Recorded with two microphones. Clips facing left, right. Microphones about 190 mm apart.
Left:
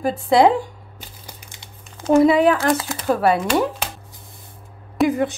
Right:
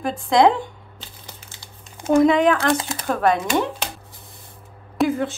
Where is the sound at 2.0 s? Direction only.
10° left (ahead or behind).